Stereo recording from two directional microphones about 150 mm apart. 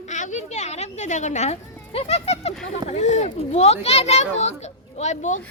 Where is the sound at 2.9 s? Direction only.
50° left (ahead or behind).